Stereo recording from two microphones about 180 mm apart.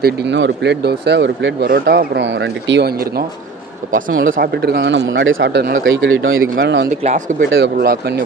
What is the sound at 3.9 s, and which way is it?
Speech, 50° right (ahead or behind).